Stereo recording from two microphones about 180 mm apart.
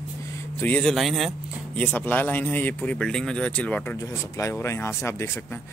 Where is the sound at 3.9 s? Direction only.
20° left (ahead or behind).